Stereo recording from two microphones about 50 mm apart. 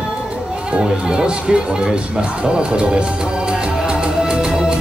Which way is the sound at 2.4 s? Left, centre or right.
Centre.